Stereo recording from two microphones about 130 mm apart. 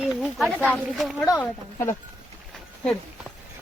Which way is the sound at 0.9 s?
Centre (ahead or behind).